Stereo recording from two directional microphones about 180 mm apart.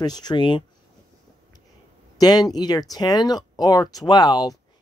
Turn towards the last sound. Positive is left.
turn(degrees=20)  # may be behind; listen again after turning